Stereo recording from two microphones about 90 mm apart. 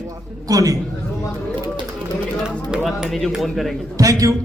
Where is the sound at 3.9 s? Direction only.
40° right (ahead or behind).